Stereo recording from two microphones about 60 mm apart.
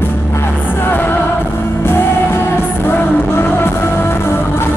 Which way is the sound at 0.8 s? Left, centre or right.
Left.